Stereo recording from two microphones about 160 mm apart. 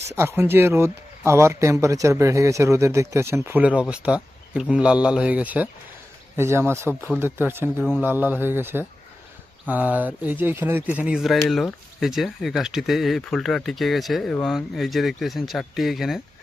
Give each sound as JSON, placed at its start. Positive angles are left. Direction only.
{"t": 0.1, "sound": "speech", "side_deg": -15}